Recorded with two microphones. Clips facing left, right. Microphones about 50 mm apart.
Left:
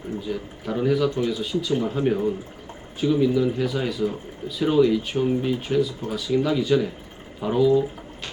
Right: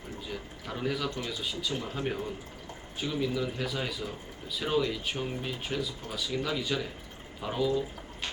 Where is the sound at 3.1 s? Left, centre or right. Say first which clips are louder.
Left 11 dB; centre.